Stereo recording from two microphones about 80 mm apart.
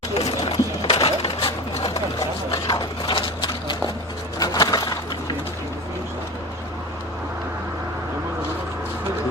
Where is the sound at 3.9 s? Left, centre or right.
Left.